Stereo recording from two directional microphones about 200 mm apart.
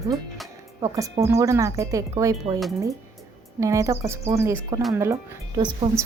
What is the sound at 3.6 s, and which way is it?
Speech, 15° right (ahead or behind).